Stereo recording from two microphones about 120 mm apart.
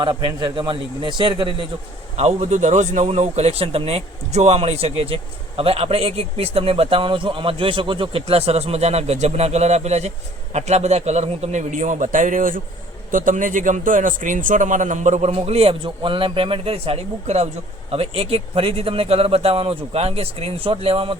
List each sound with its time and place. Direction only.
0.0 s a man's voice: 40° right (ahead or behind)
2.1 s a man's voice: 65° right (ahead or behind)
17.9 s speech: 55° right (ahead or behind)